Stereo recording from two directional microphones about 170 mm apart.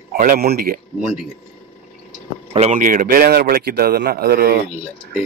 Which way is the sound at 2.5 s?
40° right (ahead or behind).